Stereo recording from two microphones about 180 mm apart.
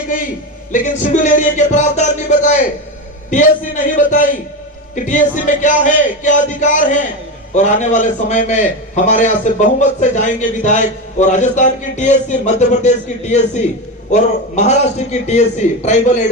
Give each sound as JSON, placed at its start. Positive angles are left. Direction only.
{"t": 0.7, "sound": "music", "side_deg": 45}
{"t": 7.5, "sound": "a man's voice", "side_deg": 40}